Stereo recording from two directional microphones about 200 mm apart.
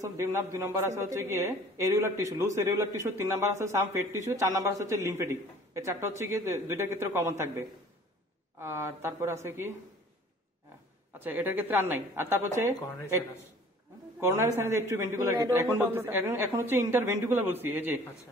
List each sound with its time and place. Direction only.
0.2 s a woman's voice: 15° right (ahead or behind)
11.1 s a woman's voice: 10° right (ahead or behind)
14.2 s a woman's voice: 15° right (ahead or behind)